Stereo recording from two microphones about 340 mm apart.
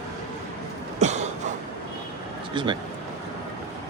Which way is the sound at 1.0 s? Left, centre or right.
Centre.